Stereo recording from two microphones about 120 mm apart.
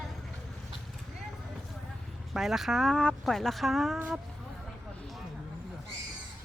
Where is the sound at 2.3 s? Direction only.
5° right (ahead or behind).